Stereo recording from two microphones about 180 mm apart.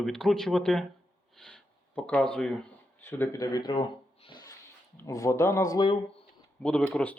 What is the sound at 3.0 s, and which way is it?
Speech, 15° left (ahead or behind).